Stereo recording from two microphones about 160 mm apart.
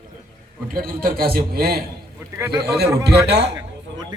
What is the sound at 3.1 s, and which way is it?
Speech, 90° right.